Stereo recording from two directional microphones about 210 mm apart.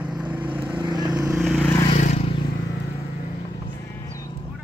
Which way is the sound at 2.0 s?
35° left (ahead or behind).